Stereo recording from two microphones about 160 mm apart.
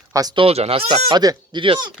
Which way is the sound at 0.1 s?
25° right (ahead or behind).